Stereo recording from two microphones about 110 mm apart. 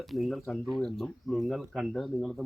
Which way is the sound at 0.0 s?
Centre (ahead or behind).